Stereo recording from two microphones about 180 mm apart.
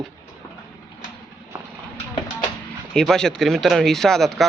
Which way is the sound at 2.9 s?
5° left (ahead or behind).